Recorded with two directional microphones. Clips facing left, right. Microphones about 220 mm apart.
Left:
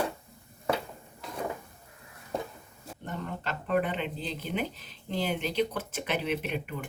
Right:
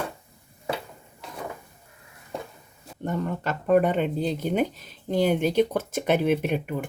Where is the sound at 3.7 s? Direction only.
45° right (ahead or behind).